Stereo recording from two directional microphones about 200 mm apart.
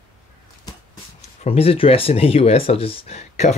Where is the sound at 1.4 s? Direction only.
30° left (ahead or behind).